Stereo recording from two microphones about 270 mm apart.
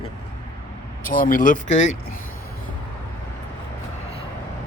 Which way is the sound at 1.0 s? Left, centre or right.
Left.